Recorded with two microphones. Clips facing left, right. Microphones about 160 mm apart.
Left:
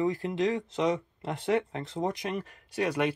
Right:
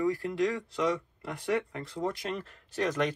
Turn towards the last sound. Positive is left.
turn(degrees=10)  # may be behind; listen again after turning